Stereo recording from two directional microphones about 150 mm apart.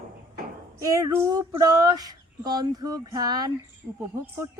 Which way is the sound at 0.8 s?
20° right (ahead or behind).